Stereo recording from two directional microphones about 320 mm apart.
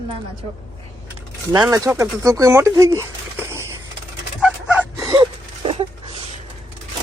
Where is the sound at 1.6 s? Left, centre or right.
Centre.